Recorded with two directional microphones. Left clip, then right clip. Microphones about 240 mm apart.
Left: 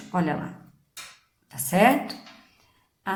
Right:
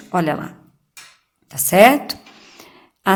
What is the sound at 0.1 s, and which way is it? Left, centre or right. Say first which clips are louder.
Speech: right 8 dB; right.